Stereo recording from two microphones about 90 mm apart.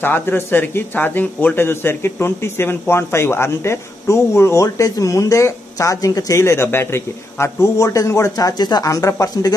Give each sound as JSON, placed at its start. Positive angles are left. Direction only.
{"t": 0.0, "sound": "speech", "side_deg": 25}